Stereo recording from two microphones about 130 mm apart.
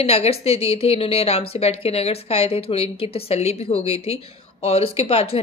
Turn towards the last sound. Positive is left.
turn(degrees=50)  # may be behind; listen again after turning